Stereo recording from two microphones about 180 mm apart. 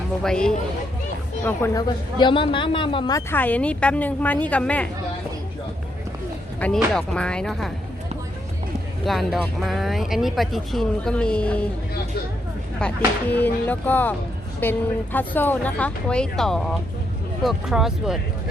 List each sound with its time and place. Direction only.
0.2 s speech: 5° left (ahead or behind)
1.5 s speech: 15° left (ahead or behind)
3.2 s speech: 10° left (ahead or behind)
6.7 s speech: 5° left (ahead or behind)
9.0 s speech: centre (ahead or behind)
12.8 s speech: 5° left (ahead or behind)